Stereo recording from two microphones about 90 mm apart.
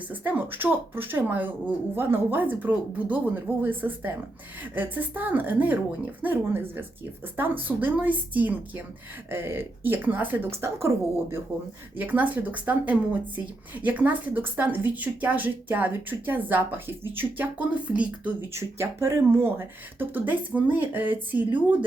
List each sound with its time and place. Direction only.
0.1 s a woman's voice: 20° right (ahead or behind)
18.5 s a woman's voice: 30° right (ahead or behind)